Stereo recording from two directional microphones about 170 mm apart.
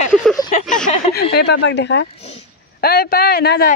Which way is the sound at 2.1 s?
35° left (ahead or behind).